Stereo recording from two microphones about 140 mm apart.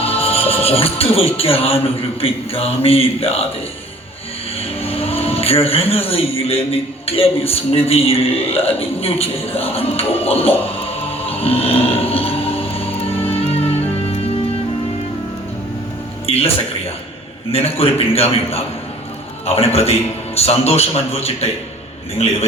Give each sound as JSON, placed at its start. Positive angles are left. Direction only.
{"t": 0.0, "sound": "a man's voice", "side_deg": 45}
{"t": 4.8, "sound": "music", "side_deg": 45}
{"t": 5.9, "sound": "a man's voice", "side_deg": 45}
{"t": 10.8, "sound": "choir", "side_deg": 45}
{"t": 16.2, "sound": "music", "side_deg": 45}
{"t": 17.5, "sound": "a man's voice", "side_deg": 45}